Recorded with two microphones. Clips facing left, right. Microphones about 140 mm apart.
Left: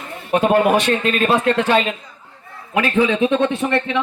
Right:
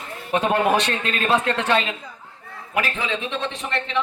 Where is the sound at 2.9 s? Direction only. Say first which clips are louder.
Left 11 dB; 55° left (ahead or behind).